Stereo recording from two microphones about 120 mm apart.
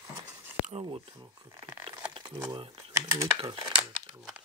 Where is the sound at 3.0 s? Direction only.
25° right (ahead or behind).